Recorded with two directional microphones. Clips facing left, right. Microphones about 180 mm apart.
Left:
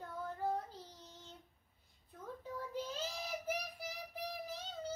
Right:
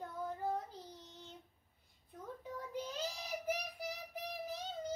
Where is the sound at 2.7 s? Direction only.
15° right (ahead or behind).